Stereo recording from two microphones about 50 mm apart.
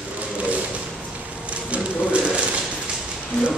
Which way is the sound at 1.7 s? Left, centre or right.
Right.